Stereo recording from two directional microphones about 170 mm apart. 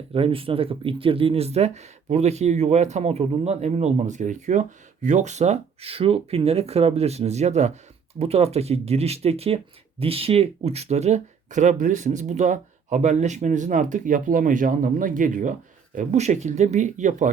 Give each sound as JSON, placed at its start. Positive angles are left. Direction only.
{"t": 0.1, "sound": "speech", "side_deg": -35}